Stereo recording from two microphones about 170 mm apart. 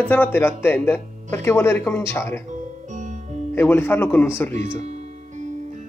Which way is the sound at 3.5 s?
10° left (ahead or behind).